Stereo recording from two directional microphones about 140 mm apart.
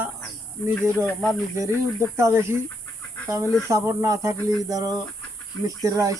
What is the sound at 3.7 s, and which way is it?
Speech, 20° right (ahead or behind).